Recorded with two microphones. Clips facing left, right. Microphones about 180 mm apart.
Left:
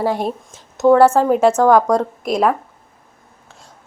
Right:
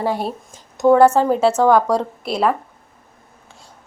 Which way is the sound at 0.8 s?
5° left (ahead or behind).